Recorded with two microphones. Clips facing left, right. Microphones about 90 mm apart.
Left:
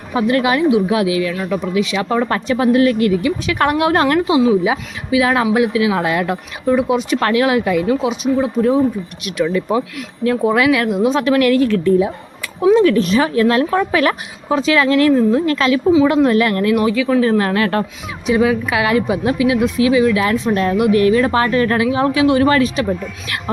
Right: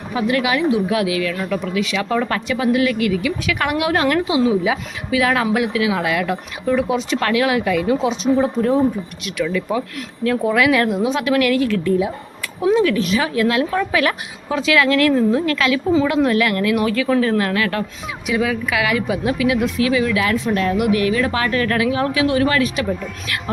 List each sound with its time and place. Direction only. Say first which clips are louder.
0.1 s a woman's voice: left 3 dB; 30° left (ahead or behind)
2.3 s a woman's voice: left 4 dB; 35° left (ahead or behind)
6.7 s speech: left 3 dB; 15° left (ahead or behind)
7.2 s a woman's voice: left 2 dB; 25° left (ahead or behind)
8.4 s speech: left 4 dB; 10° left (ahead or behind)
9.4 s a woman's voice: left 4 dB; 30° left (ahead or behind)
16.9 s speech: left 2 dB; 10° left (ahead or behind)
17.2 s a woman's voice: left 3 dB; 25° left (ahead or behind)